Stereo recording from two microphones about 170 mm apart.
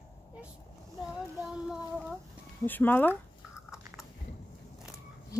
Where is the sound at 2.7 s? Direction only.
10° left (ahead or behind).